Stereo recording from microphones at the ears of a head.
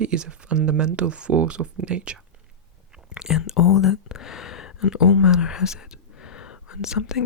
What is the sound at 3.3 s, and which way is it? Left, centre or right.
Speech, left.